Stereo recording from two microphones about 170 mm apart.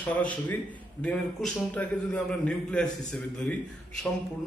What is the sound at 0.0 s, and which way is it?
A man's voice, 10° left (ahead or behind).